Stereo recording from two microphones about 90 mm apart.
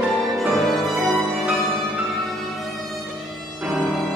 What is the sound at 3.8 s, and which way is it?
Music, centre (ahead or behind).